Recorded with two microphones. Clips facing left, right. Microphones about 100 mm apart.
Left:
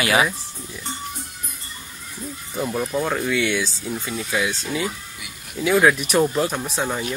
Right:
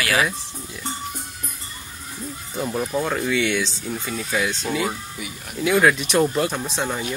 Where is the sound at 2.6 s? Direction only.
Centre (ahead or behind).